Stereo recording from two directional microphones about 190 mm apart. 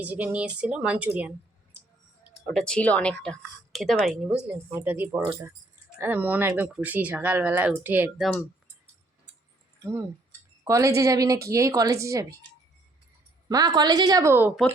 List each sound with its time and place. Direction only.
0.0 s speech: 10° right (ahead or behind)
2.5 s speech: 5° left (ahead or behind)
9.8 s speech: 15° right (ahead or behind)
13.5 s a woman's voice: 20° right (ahead or behind)